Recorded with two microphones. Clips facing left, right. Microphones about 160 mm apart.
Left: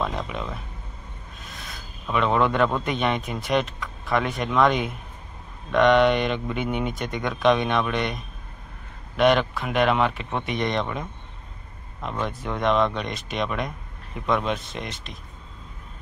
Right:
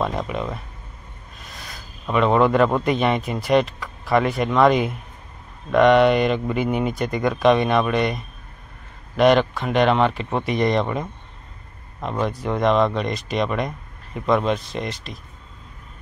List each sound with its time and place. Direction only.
0.0 s speech: centre (ahead or behind)
1.5 s a sound: centre (ahead or behind)
2.3 s speech: centre (ahead or behind)
12.0 s speech: 35° right (ahead or behind)
12.3 s speech: centre (ahead or behind)